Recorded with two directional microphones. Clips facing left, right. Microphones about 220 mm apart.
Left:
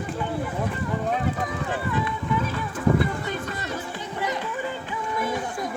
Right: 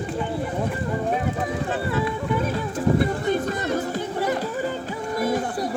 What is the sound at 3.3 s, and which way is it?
Music, 45° right (ahead or behind).